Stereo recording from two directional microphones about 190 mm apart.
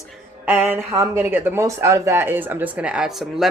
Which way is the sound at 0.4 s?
10° right (ahead or behind).